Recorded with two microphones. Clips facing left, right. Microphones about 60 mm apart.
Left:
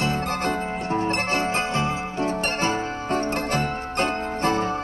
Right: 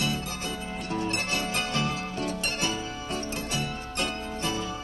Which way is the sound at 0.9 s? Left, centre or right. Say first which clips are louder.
Left 5 dB; left.